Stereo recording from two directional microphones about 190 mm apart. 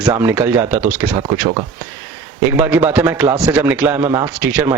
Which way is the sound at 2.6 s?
10° right (ahead or behind).